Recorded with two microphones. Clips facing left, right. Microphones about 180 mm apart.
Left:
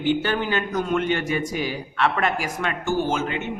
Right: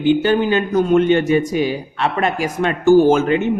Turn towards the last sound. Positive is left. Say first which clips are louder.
# right 12 dB
turn(degrees=-45)  # may be behind; listen again after turning